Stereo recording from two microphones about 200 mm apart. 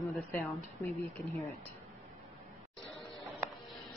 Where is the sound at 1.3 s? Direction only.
Centre (ahead or behind).